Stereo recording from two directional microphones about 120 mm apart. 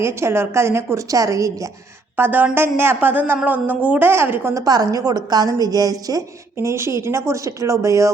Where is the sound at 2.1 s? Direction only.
15° right (ahead or behind).